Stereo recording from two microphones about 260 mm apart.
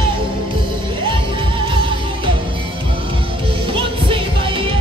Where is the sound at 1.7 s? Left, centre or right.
Centre.